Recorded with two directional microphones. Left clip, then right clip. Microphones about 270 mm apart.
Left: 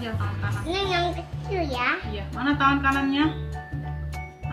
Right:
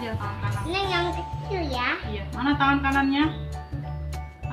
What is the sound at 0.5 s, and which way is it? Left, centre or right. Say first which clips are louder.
Music: left 1 dB; centre.